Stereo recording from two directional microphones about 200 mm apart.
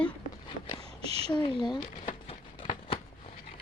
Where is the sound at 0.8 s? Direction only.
30° right (ahead or behind).